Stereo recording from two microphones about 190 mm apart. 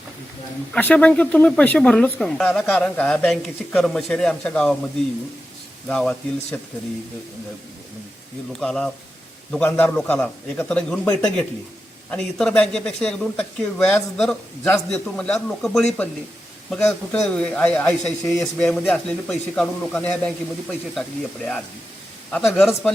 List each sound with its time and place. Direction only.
0.7 s a man's voice: 10° left (ahead or behind)
5.9 s a man's voice: 5° left (ahead or behind)
8.5 s a man's voice: centre (ahead or behind)
22.3 s a man's voice: 5° left (ahead or behind)